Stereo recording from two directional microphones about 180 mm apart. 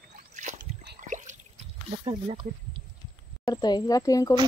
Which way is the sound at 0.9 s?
45° right (ahead or behind).